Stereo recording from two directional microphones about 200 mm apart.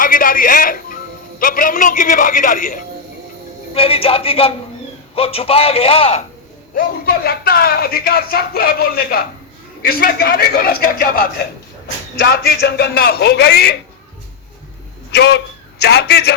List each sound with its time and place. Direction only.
0.0 s speech: 45° left (ahead or behind)
3.8 s a man's voice: 30° left (ahead or behind)
6.7 s speech: 50° left (ahead or behind)
15.1 s a man's voice: 55° left (ahead or behind)